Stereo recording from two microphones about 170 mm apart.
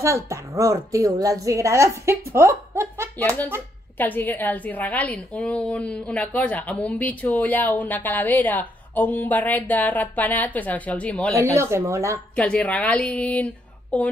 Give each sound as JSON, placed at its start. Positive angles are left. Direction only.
{"t": 0.0, "sound": "a woman's voice", "side_deg": -15}
{"t": 4.0, "sound": "a woman's voice", "side_deg": 10}
{"t": 11.3, "sound": "a woman's voice", "side_deg": -15}
{"t": 12.4, "sound": "a woman's voice", "side_deg": 5}